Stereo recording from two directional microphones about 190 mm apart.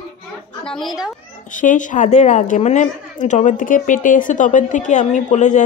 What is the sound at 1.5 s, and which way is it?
A woman's voice, 40° left (ahead or behind).